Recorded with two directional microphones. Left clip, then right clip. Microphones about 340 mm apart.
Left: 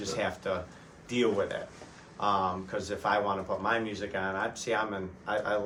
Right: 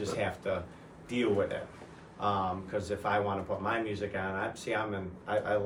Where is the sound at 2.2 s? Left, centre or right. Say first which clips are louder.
Left 3 dB; centre.